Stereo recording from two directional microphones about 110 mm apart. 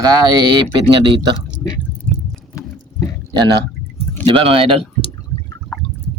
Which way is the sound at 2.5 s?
30° left (ahead or behind).